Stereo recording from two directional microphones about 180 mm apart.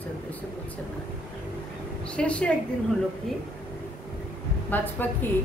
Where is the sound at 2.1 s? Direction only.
5° left (ahead or behind).